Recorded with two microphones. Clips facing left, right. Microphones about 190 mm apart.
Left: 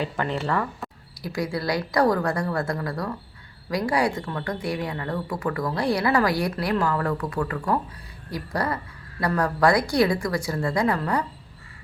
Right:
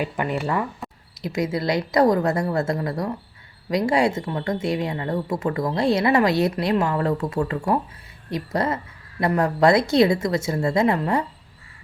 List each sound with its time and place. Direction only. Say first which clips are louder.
0.0 s speech: right 2 dB; 15° right (ahead or behind)